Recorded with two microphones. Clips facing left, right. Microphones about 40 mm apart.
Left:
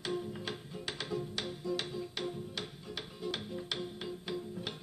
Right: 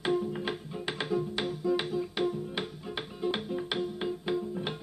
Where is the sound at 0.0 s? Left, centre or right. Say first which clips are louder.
Right 8 dB; right.